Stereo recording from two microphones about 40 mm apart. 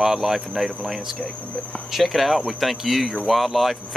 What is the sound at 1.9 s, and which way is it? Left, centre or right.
Speech, centre.